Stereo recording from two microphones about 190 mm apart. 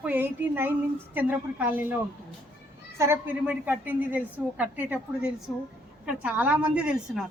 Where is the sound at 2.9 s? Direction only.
15° right (ahead or behind).